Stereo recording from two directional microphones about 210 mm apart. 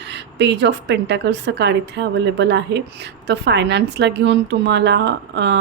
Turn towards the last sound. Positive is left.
turn(degrees=-55)  # may be behind; listen again after turning